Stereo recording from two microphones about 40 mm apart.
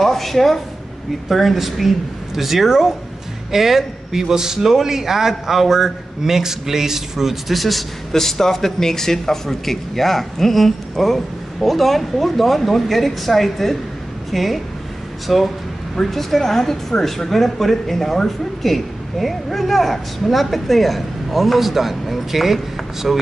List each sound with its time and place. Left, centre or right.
0.0 s a man's voice: centre